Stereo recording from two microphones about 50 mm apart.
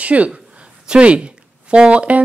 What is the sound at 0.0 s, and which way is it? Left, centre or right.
A woman's voice, right.